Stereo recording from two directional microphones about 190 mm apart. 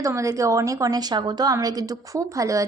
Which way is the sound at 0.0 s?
15° right (ahead or behind).